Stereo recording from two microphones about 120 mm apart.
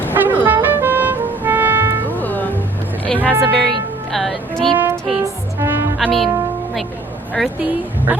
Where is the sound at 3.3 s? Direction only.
15° right (ahead or behind).